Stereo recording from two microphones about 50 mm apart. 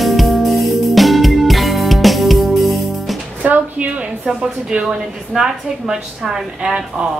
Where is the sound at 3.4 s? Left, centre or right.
Right.